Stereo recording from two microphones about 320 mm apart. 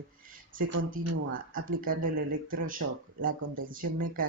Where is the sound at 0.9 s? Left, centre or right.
Right.